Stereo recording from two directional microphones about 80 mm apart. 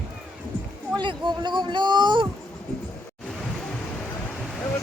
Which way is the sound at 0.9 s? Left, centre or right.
Right.